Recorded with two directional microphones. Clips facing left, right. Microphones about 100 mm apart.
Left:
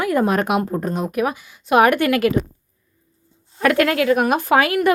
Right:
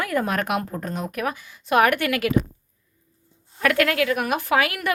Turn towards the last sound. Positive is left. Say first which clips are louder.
# left 6 dB
turn(degrees=30)  # may be behind; listen again after turning